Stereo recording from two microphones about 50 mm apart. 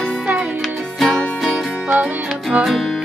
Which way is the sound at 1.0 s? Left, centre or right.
Centre.